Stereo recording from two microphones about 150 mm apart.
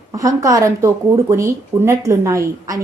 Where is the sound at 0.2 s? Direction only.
20° right (ahead or behind).